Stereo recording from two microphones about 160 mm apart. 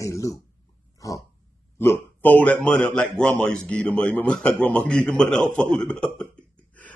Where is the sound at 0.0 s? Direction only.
20° left (ahead or behind).